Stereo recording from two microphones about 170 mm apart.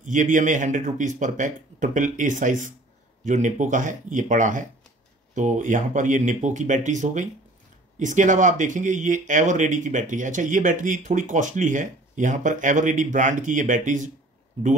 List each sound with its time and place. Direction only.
0.0 s speech: 50° right (ahead or behind)